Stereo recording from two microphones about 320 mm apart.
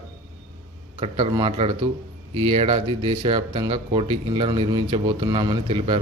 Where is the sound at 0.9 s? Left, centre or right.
Centre.